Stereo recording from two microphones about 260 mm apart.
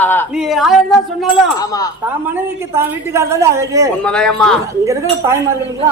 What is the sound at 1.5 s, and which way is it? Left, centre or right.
Speech, centre.